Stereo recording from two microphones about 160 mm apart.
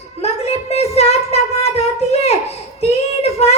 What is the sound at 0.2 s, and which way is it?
Child singing, 40° left (ahead or behind).